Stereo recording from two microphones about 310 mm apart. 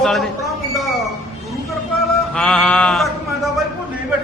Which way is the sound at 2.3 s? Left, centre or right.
Centre.